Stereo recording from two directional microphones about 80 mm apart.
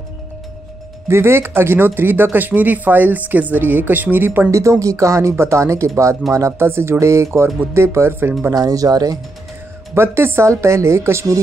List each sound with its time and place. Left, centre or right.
1.0 s speech: right
4.5 s speech: right
8.5 s speech: right
9.9 s speech: right